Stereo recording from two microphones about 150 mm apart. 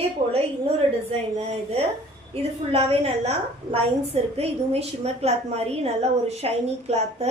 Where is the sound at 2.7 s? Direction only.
40° right (ahead or behind).